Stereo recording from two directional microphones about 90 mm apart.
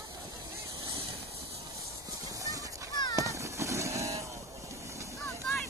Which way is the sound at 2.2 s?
40° right (ahead or behind).